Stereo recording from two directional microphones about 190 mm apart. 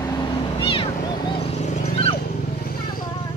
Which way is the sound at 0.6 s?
25° left (ahead or behind).